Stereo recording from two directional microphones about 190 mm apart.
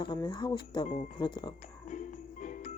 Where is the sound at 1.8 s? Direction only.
40° left (ahead or behind).